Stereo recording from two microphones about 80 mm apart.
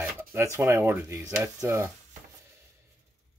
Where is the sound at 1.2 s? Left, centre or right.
Right.